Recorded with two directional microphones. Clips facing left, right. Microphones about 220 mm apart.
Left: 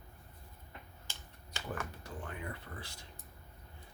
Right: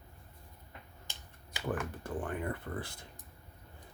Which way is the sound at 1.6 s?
50° right (ahead or behind).